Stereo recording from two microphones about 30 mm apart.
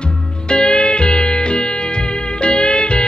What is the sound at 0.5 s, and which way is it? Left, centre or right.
Music, left.